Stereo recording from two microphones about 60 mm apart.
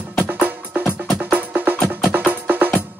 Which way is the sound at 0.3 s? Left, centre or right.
Right.